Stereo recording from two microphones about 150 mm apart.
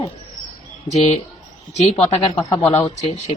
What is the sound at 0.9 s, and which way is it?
A man's voice, 45° left (ahead or behind).